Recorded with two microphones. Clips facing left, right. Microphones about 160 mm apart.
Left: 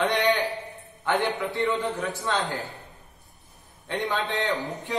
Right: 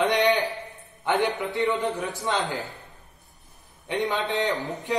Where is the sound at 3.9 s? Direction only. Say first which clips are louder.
Right 2 dB; 15° right (ahead or behind).